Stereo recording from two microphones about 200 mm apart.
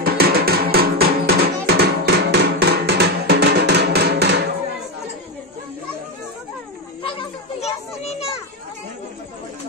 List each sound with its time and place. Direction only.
0.0 s music: 50° right (ahead or behind)
7.0 s children playing: 25° left (ahead or behind)